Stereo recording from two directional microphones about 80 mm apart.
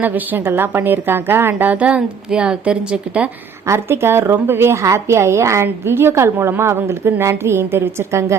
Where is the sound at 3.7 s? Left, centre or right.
Right.